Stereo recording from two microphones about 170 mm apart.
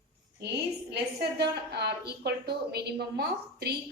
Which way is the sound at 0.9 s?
80° right.